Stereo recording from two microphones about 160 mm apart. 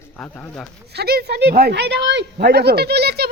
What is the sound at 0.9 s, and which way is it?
A woman's voice, 85° right.